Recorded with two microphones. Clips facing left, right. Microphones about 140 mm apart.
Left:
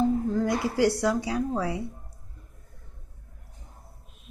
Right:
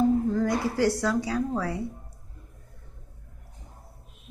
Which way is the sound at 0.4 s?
15° left (ahead or behind).